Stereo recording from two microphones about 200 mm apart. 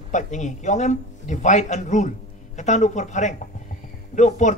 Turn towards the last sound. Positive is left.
turn(degrees=40)  # may be behind; listen again after turning